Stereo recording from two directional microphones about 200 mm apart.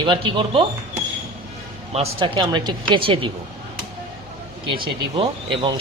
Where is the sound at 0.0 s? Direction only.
25° right (ahead or behind).